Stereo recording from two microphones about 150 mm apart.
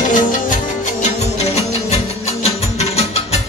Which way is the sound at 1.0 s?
45° left (ahead or behind).